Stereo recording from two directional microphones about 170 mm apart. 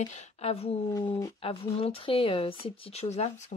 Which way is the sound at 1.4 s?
35° left (ahead or behind).